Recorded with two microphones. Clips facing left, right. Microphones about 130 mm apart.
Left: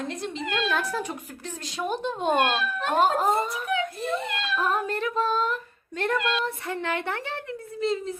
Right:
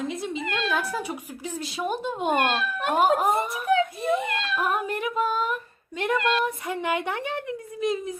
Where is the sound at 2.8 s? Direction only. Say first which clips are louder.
Right 1 dB; 10° right (ahead or behind).